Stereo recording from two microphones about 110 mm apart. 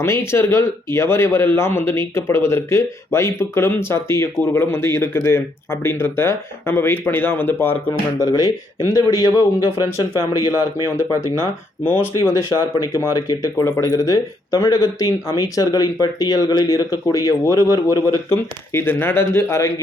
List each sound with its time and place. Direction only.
0.0 s speech: 25° left (ahead or behind)
8.2 s speech: 40° left (ahead or behind)
10.8 s speech: 25° left (ahead or behind)
12.5 s speech: 35° left (ahead or behind)
18.3 s speech: 20° left (ahead or behind)